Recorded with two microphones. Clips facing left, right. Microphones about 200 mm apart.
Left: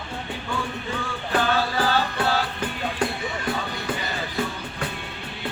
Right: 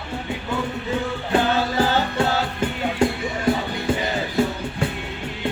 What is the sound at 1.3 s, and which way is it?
Music, 20° right (ahead or behind).